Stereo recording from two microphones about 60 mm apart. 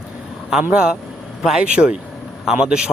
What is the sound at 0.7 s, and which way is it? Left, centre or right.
Speech, centre.